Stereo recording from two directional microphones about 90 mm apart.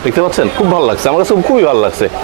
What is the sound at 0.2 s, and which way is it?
Speech, 30° right (ahead or behind).